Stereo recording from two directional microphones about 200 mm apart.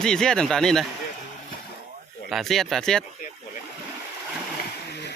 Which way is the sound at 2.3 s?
Centre (ahead or behind).